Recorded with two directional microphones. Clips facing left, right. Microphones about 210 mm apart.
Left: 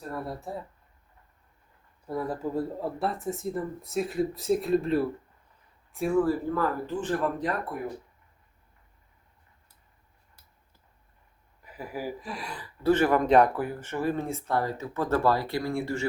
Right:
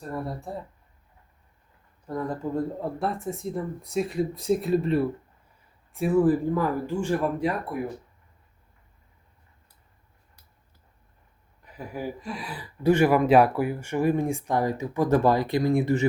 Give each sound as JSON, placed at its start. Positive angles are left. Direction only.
{"t": 0.1, "sound": "speech", "side_deg": 0}
{"t": 2.0, "sound": "speech", "side_deg": 5}
{"t": 6.2, "sound": "speech", "side_deg": -15}
{"t": 11.6, "sound": "speech", "side_deg": 5}
{"t": 12.6, "sound": "speech", "side_deg": -15}